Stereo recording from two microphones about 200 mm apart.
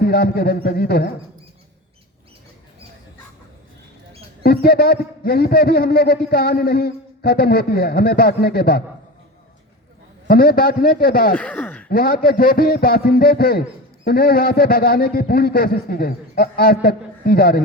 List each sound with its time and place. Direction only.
0.0 s a man's voice: 50° left (ahead or behind)
4.4 s a man's voice: 50° left (ahead or behind)
10.2 s a man's voice: 45° left (ahead or behind)
11.3 s a sound: 10° left (ahead or behind)
11.9 s a man's voice: 45° left (ahead or behind)